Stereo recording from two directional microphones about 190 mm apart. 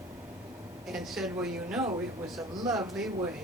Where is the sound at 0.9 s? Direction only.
Centre (ahead or behind).